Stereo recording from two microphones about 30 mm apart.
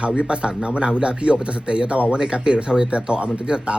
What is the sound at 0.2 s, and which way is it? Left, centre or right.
Speech, right.